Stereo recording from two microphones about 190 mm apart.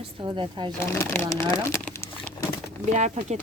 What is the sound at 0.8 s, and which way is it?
Speech, 15° left (ahead or behind).